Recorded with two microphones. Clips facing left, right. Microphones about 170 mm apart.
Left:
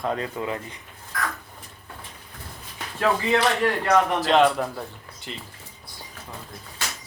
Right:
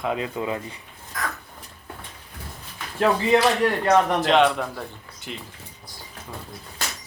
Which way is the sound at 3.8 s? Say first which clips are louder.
Right 2 dB; 20° right (ahead or behind).